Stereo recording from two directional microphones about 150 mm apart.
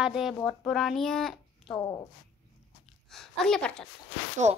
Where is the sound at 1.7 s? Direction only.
25° left (ahead or behind).